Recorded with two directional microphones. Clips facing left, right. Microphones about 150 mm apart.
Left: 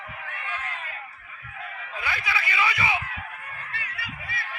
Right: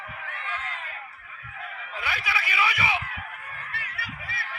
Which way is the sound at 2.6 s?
20° right (ahead or behind).